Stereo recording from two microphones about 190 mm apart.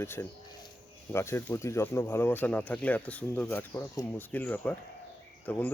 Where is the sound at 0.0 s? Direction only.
10° left (ahead or behind).